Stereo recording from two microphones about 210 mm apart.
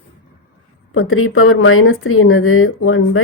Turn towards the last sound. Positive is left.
turn(degrees=80)